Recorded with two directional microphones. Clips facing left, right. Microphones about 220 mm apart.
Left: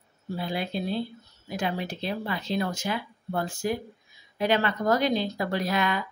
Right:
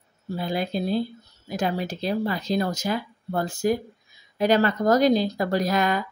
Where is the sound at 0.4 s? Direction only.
40° right (ahead or behind).